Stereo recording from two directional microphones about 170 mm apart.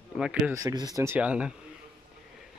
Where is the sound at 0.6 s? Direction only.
20° right (ahead or behind).